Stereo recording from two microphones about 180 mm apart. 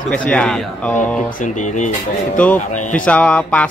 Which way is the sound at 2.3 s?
5° left (ahead or behind).